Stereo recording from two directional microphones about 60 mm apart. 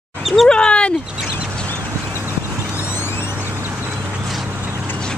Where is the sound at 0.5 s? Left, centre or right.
Centre.